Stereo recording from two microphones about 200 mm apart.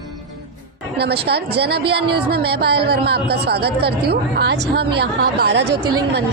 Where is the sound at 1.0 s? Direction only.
55° right (ahead or behind).